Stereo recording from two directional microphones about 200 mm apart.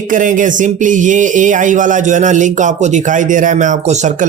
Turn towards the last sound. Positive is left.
turn(degrees=-40)  # may be behind; listen again after turning